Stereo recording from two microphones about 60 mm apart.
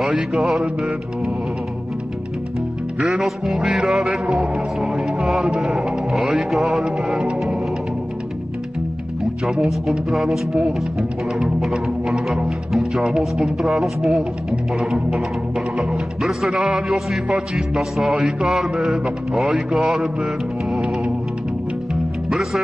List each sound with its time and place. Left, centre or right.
0.1 s music: centre
3.0 s music: centre
4.9 s music: centre
9.2 s music: centre
11.3 s speech: centre
14.8 s music: centre
15.8 s speech: centre
16.5 s speech: right
16.9 s music: centre
22.3 s speech: centre